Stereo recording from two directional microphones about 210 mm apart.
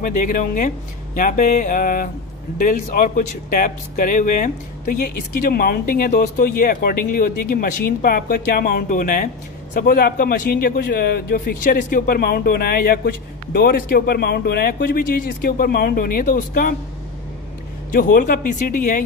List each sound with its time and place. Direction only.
0.0 s speech: 40° left (ahead or behind)
17.9 s speech: 40° left (ahead or behind)